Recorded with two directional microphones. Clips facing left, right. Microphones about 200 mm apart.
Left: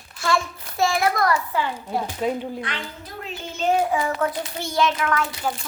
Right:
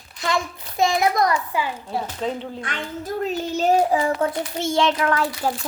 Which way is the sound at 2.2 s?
10° left (ahead or behind).